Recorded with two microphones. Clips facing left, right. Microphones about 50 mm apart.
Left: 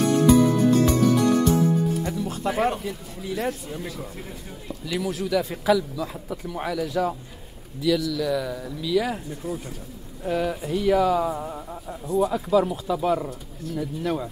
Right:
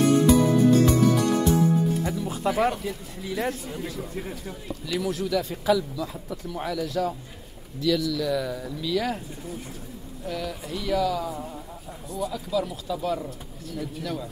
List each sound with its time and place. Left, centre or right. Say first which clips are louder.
0.3 s music: left 1 dB; centre
2.0 s speech: even; centre
4.8 s a man's voice: even; centre
10.2 s speech: left 7 dB; left